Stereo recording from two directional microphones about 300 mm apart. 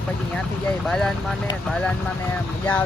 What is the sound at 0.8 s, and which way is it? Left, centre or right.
Speech, centre.